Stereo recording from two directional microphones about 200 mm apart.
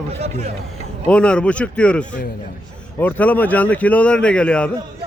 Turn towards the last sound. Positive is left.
turn(degrees=5)  # may be behind; listen again after turning